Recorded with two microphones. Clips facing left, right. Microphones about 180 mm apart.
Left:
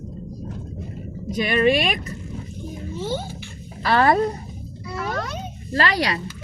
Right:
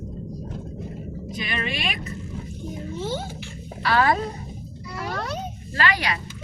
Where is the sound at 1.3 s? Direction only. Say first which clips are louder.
Left 12 dB; 45° left (ahead or behind).